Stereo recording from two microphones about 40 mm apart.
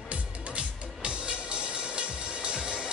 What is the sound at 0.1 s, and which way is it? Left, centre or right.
Music, right.